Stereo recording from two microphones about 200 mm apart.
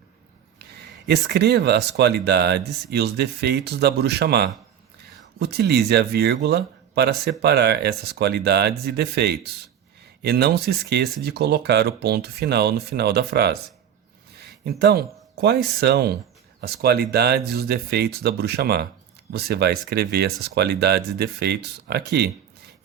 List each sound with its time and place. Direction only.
1.0 s speech: 55° right (ahead or behind)